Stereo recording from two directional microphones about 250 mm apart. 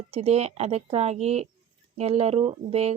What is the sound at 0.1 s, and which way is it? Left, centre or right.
Speech, right.